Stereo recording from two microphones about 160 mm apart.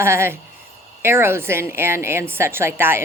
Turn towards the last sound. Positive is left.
turn(degrees=-15)  # may be behind; listen again after turning